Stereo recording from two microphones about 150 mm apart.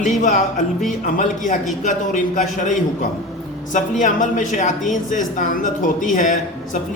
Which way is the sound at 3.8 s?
55° left (ahead or behind).